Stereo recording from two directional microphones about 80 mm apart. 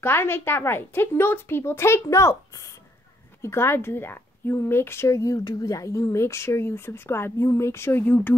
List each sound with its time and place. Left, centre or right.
0.0 s a woman's voice: left